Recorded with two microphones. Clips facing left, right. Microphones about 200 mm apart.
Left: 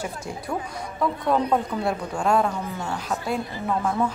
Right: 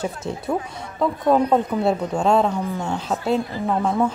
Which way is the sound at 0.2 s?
20° right (ahead or behind).